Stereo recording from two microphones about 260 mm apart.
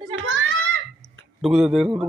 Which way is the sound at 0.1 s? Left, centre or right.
Right.